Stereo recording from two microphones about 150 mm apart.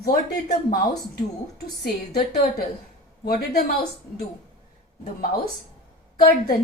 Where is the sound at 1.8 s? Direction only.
85° left.